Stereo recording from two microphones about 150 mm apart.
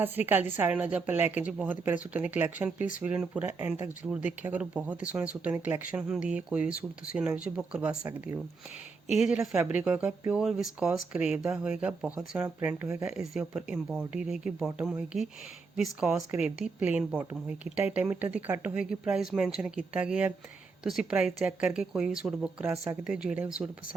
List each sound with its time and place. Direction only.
0.0 s speech: 15° right (ahead or behind)
2.7 s speech: 60° left (ahead or behind)
3.0 s speech: 10° right (ahead or behind)
9.2 s speech: centre (ahead or behind)